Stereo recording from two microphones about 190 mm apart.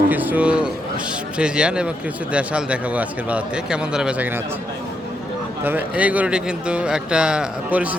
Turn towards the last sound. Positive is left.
turn(degrees=-5)  # may be behind; listen again after turning